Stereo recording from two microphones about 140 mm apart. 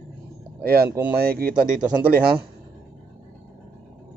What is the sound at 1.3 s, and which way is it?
Speech, 90° right.